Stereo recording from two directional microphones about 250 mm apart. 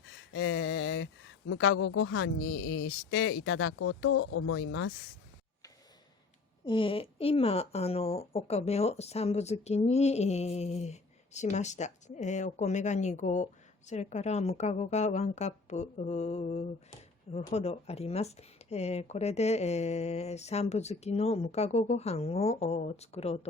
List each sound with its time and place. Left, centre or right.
0.0 s a sound: left
1.5 s a woman's voice: left
6.7 s speech: left